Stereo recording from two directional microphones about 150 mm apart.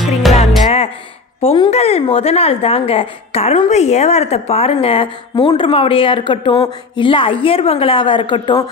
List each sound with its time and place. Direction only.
0.2 s music: centre (ahead or behind)
1.4 s a woman's voice: 40° left (ahead or behind)